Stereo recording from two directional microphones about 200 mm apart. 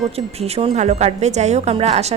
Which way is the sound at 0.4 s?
30° right (ahead or behind).